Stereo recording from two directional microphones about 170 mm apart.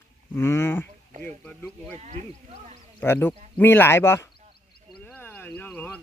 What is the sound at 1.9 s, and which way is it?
Speech, 40° right (ahead or behind).